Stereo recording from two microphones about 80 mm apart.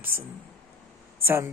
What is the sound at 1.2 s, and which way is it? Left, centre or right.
Speech, right.